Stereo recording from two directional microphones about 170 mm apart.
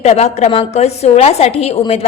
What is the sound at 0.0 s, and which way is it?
A woman's voice, 40° left (ahead or behind).